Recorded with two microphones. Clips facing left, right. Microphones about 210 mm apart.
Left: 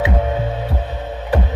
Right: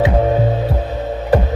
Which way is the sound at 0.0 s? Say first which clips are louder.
Right 5 dB; 35° right (ahead or behind).